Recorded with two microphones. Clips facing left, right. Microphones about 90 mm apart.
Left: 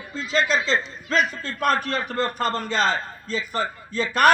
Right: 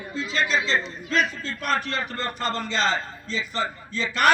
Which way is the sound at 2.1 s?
50° left (ahead or behind).